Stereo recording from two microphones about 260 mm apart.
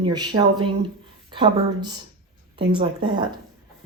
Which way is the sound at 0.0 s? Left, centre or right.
Centre.